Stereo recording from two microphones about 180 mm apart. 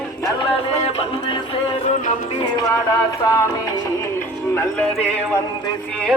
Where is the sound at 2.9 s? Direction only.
20° left (ahead or behind).